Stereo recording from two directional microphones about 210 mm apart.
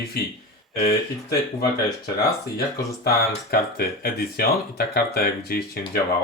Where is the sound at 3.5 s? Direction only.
45° left (ahead or behind).